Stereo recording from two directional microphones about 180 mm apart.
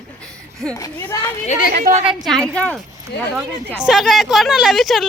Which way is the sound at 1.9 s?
40° right (ahead or behind).